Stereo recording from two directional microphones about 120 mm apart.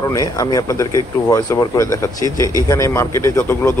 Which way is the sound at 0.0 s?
30° left (ahead or behind).